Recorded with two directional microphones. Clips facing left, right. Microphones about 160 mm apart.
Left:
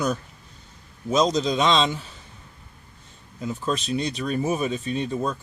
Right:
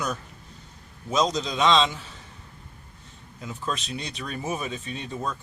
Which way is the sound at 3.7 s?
40° left (ahead or behind).